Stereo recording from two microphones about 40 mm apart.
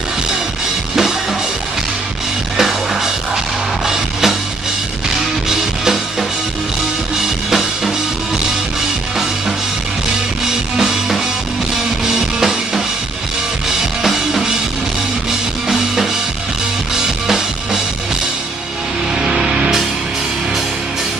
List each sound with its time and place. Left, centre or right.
2.5 s music: centre
10.8 s music: centre
14.0 s music: centre
16.9 s music: centre
19.1 s music: centre